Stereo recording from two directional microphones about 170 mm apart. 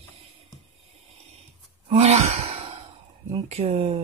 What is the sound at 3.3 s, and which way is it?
Speech, 35° right (ahead or behind).